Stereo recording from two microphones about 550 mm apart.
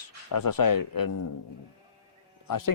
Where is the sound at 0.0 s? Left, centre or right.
Left.